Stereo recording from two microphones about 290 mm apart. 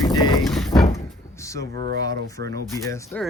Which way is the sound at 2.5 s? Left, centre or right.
Centre.